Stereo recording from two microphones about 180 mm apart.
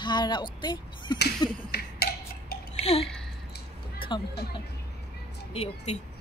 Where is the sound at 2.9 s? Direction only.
35° left (ahead or behind).